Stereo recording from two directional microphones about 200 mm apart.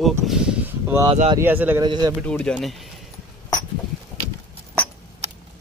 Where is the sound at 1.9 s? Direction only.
20° right (ahead or behind).